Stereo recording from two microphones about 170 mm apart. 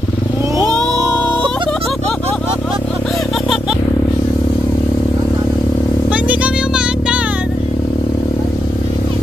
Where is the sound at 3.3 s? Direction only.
Centre (ahead or behind).